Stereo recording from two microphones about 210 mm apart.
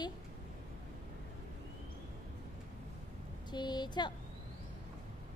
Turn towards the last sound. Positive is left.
turn(degrees=20)  # may be behind; listen again after turning